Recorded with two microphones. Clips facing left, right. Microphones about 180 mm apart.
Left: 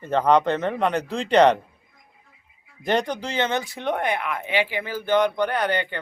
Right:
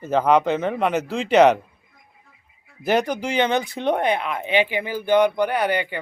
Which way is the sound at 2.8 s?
5° right (ahead or behind).